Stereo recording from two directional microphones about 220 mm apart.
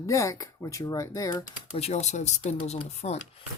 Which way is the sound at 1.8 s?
30° left (ahead or behind).